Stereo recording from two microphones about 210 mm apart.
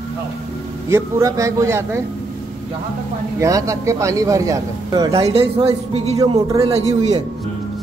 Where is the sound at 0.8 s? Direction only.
15° right (ahead or behind).